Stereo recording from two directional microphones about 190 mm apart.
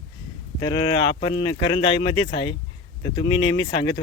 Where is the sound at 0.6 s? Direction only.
25° left (ahead or behind).